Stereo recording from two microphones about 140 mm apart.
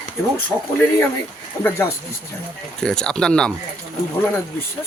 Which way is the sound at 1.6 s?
15° left (ahead or behind).